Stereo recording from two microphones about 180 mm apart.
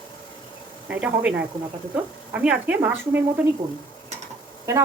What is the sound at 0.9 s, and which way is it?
Speech, 5° right (ahead or behind).